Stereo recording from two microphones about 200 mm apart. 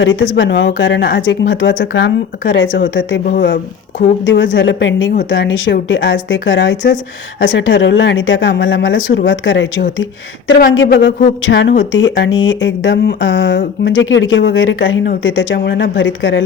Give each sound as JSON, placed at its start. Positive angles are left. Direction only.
{"t": 0.0, "sound": "speech", "side_deg": 70}
{"t": 3.2, "sound": "speech", "side_deg": 50}
{"t": 4.5, "sound": "speech", "side_deg": 65}
{"t": 10.5, "sound": "speech", "side_deg": 55}